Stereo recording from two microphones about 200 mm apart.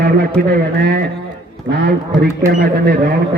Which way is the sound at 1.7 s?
20° right (ahead or behind).